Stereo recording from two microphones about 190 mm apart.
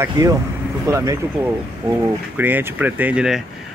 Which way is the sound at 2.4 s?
10° right (ahead or behind).